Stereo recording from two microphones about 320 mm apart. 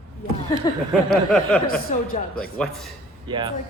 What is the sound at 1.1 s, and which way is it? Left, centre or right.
Speech, centre.